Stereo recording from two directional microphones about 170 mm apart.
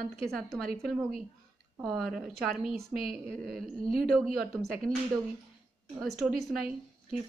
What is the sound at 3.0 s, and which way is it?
Speech, 60° right (ahead or behind).